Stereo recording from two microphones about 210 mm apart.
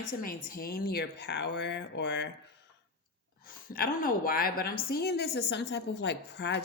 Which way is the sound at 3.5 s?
45° left (ahead or behind).